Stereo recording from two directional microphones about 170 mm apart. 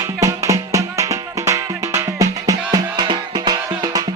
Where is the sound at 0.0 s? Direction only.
20° right (ahead or behind).